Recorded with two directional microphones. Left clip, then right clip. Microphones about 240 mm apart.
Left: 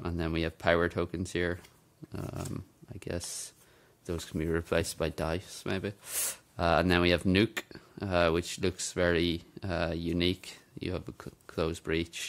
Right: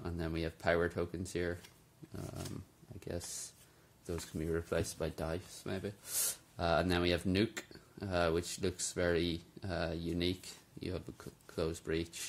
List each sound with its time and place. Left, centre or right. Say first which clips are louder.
0.0 s speech: left 7 dB; left
2.1 s a sound: left 6 dB; left
3.0 s speech: left 5 dB; left